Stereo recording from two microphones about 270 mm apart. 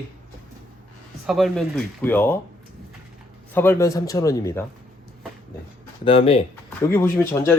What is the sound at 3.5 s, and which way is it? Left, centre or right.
A man's voice, centre.